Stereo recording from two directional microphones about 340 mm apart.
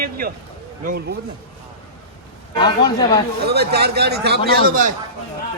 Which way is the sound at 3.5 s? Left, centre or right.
Right.